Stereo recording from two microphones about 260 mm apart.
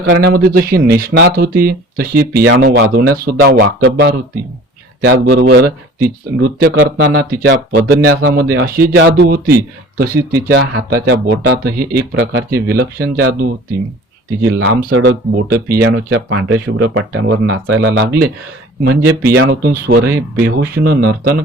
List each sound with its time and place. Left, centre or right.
0.1 s speech: right
14.5 s speech: right